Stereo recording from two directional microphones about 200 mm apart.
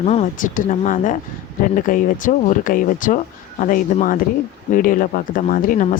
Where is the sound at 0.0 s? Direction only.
35° left (ahead or behind).